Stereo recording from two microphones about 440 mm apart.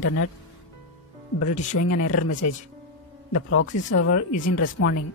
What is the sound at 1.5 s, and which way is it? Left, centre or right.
Speech, centre.